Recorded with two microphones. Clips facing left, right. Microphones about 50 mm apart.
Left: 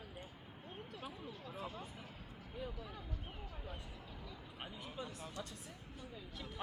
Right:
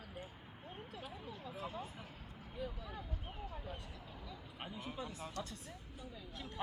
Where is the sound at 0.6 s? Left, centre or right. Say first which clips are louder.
Even; centre.